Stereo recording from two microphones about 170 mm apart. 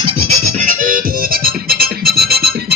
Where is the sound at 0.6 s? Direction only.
55° right (ahead or behind).